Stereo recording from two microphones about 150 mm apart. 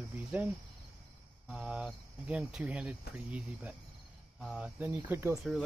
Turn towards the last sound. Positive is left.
turn(degrees=0)  # may be behind; listen again after turning